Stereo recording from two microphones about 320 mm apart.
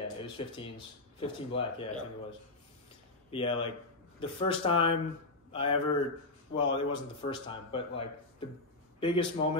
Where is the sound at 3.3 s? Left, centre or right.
Centre.